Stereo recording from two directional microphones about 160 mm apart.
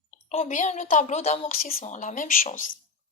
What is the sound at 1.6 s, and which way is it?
Speech, 65° left (ahead or behind).